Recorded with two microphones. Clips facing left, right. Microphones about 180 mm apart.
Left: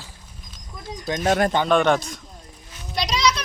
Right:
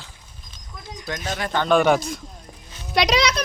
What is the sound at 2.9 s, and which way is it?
Speech, 70° right (ahead or behind).